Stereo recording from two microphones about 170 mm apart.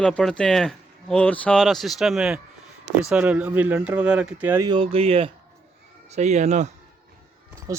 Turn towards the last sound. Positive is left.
turn(degrees=-20)  # may be behind; listen again after turning